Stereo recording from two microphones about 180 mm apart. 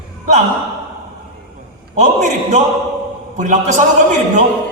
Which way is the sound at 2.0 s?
40° right (ahead or behind).